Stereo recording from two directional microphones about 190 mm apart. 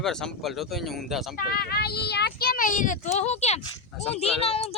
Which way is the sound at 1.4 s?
50° left (ahead or behind).